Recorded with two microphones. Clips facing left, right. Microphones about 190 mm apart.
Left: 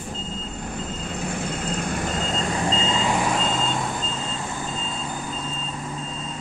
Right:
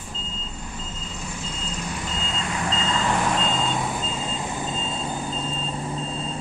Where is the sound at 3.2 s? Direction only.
5° left (ahead or behind).